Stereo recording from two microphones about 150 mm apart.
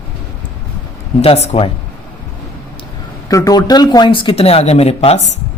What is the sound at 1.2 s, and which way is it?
Speech, 45° left (ahead or behind).